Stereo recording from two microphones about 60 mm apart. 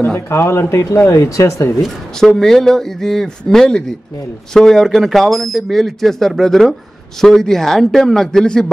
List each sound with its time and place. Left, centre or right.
0.3 s speech: left
2.1 s a man's voice: centre